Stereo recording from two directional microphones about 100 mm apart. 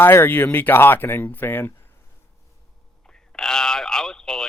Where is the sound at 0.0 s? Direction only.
25° left (ahead or behind).